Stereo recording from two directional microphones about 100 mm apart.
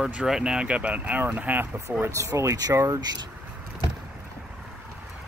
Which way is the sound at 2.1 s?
30° right (ahead or behind).